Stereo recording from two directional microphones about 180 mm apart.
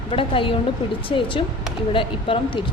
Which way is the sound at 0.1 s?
30° left (ahead or behind).